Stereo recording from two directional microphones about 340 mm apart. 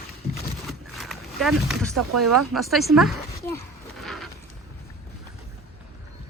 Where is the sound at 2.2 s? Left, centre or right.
Right.